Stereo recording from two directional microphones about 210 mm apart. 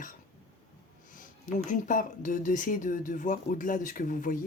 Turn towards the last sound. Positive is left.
turn(degrees=40)  # may be behind; listen again after turning